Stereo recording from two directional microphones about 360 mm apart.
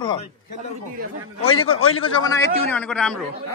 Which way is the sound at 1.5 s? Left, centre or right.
Left.